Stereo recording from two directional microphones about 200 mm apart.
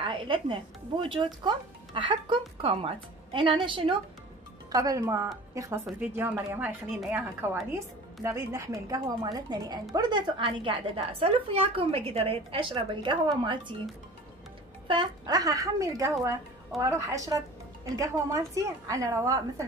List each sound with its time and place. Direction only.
0.0 s a woman's voice: 25° right (ahead or behind)
14.9 s a woman's voice: 20° right (ahead or behind)